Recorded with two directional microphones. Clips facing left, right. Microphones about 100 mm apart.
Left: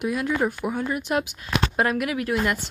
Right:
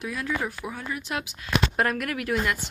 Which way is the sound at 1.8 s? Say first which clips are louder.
Left 3 dB; 5° left (ahead or behind).